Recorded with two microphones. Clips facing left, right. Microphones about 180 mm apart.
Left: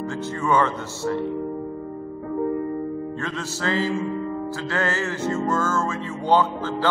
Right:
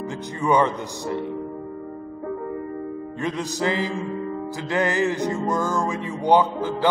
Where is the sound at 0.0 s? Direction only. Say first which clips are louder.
Even; 15° right (ahead or behind).